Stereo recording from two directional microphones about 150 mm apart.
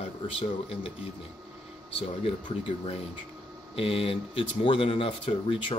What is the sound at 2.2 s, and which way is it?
Speech, 40° left (ahead or behind).